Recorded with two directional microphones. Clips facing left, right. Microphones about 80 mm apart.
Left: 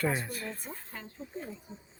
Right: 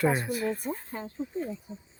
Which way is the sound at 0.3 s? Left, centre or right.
Centre.